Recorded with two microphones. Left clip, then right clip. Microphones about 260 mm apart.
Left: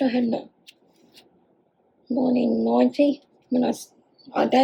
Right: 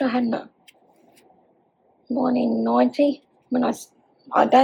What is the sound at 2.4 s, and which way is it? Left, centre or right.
Speech, right.